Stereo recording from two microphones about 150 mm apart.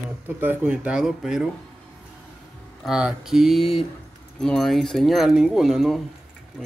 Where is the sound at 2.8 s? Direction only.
5° right (ahead or behind).